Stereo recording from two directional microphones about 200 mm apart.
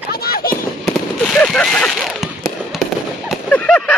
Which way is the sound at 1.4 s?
5° left (ahead or behind).